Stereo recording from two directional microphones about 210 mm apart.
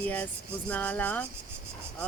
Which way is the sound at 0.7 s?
5° left (ahead or behind).